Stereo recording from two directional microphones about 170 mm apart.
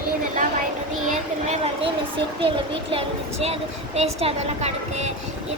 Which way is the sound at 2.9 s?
35° right (ahead or behind).